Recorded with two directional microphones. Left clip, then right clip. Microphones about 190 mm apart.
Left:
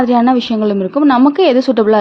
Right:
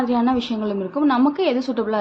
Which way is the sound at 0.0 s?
50° left (ahead or behind).